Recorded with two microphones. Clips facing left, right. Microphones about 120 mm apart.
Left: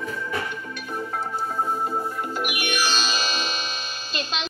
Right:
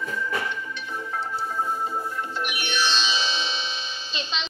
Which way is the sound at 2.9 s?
45° left (ahead or behind).